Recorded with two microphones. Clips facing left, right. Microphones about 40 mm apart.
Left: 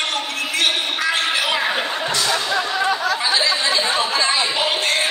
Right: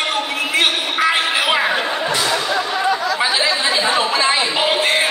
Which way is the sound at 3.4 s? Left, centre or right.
Centre.